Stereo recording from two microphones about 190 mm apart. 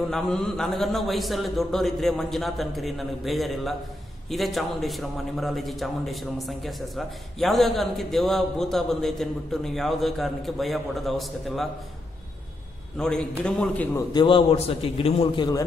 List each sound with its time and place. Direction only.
0.1 s a man's voice: centre (ahead or behind)
12.9 s a man's voice: 5° left (ahead or behind)
14.1 s a man's voice: 25° left (ahead or behind)